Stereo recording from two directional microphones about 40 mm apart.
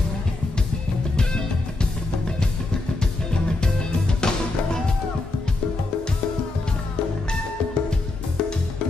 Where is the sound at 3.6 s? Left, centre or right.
Centre.